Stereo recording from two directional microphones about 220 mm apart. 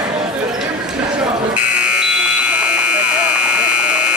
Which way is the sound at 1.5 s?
5° right (ahead or behind).